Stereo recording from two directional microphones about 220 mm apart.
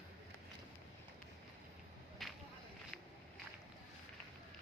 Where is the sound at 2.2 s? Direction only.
Centre (ahead or behind).